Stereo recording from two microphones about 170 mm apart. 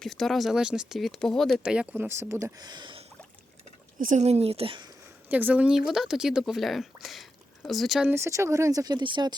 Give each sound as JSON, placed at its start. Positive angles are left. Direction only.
{"t": 0.0, "sound": "speech", "side_deg": 0}
{"t": 3.9, "sound": "speech", "side_deg": -50}
{"t": 5.3, "sound": "speech", "side_deg": -10}
{"t": 8.1, "sound": "speech", "side_deg": -15}